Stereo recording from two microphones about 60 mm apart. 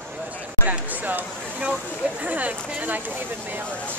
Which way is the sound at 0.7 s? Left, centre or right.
Right.